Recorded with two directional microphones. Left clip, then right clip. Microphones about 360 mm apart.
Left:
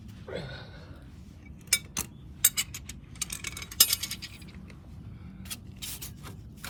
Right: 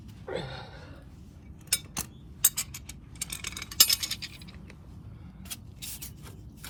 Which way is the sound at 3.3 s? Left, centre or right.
Centre.